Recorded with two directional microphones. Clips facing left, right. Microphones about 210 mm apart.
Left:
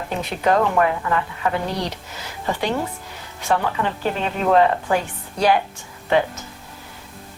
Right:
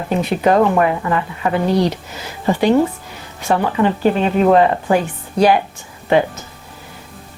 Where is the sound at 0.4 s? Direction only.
15° right (ahead or behind).